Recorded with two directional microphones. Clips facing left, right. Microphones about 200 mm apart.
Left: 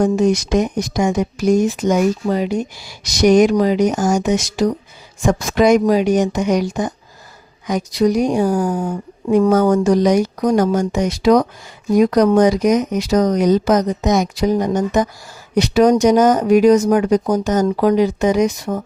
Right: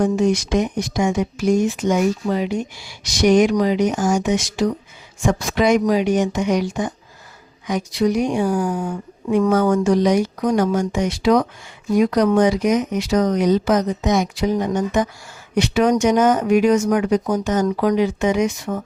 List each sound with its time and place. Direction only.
0.0 s speech: 40° left (ahead or behind)